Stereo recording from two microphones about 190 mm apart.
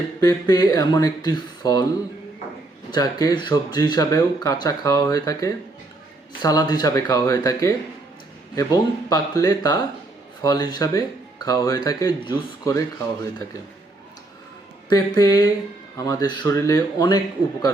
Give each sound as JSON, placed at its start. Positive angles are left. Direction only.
{"t": 0.2, "sound": "speech", "side_deg": 20}
{"t": 2.9, "sound": "speech", "side_deg": 20}
{"t": 14.8, "sound": "speech", "side_deg": 20}